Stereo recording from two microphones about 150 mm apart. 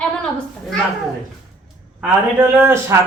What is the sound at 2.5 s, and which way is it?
Speech, 15° right (ahead or behind).